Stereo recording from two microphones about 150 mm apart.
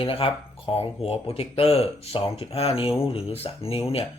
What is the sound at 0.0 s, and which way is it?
Speech, 35° left (ahead or behind).